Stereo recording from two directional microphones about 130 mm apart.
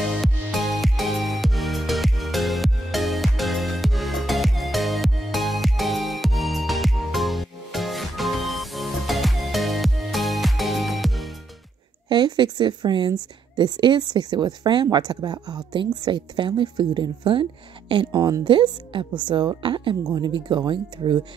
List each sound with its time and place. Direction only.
0.2 s music: centre (ahead or behind)
12.1 s a woman's voice: 35° right (ahead or behind)